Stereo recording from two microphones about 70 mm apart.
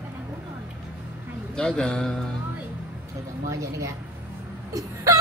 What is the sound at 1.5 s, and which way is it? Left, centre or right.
Speech, centre.